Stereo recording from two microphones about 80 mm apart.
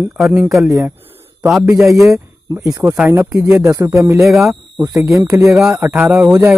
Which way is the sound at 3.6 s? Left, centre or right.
Right.